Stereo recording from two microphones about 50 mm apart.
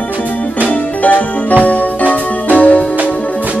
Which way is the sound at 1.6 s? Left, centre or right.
Left.